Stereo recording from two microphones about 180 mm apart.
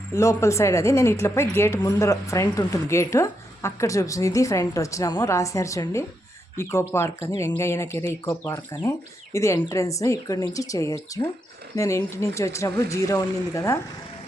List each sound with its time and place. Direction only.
0.1 s a woman's voice: 15° left (ahead or behind)